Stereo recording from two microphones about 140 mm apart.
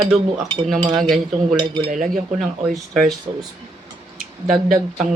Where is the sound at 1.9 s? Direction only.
65° right (ahead or behind).